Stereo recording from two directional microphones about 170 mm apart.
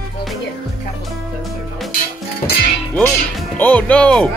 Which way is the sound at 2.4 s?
65° left (ahead or behind).